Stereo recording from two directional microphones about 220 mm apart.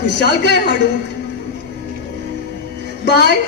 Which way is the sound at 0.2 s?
50° left (ahead or behind).